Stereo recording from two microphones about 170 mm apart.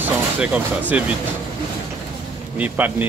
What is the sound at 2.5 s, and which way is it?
Speech, 10° right (ahead or behind).